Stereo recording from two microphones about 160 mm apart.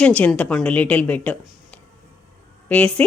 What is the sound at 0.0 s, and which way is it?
A woman's voice, 5° left (ahead or behind).